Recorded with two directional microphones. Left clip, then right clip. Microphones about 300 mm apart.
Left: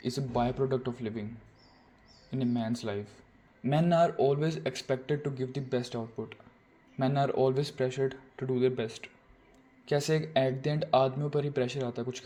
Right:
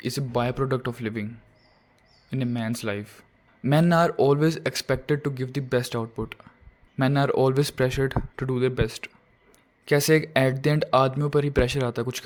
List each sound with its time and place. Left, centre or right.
0.0 s a man's voice: right
2.3 s a man's voice: right